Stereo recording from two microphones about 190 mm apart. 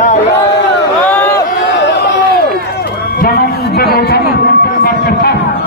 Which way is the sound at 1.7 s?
65° left (ahead or behind).